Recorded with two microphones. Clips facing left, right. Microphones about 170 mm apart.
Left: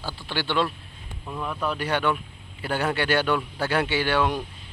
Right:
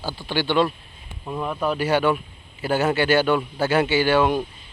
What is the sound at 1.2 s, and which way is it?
Speech, 25° right (ahead or behind).